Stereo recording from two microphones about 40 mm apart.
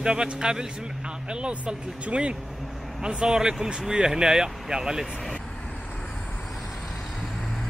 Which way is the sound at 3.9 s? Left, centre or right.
Centre.